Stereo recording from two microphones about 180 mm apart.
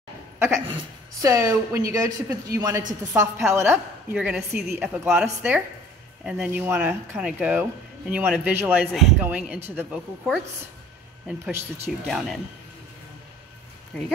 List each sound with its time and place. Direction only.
1.2 s a woman's voice: 15° right (ahead or behind)
13.9 s speech: 5° left (ahead or behind)